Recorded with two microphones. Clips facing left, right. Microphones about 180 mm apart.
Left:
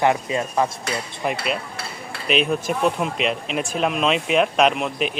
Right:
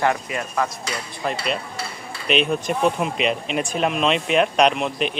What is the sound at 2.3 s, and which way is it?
Speech, centre (ahead or behind).